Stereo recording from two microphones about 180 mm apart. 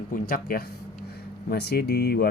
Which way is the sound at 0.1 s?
50° left (ahead or behind).